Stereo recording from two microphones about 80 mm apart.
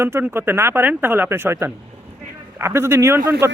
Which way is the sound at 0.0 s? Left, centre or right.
Right.